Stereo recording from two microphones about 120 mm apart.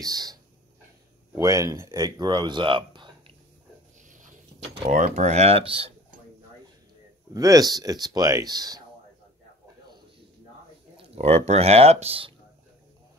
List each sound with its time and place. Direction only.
0.0 s speech: 30° right (ahead or behind)
1.4 s speech: 25° right (ahead or behind)
4.8 s speech: 85° right; by 5.9 s 50° right (ahead or behind)
7.3 s speech: 30° right (ahead or behind)
11.0 s speech: 60° right (ahead or behind)